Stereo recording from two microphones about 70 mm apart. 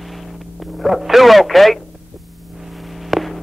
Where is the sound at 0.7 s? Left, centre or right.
Centre.